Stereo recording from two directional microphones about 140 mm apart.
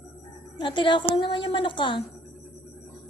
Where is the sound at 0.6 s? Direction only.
35° left (ahead or behind).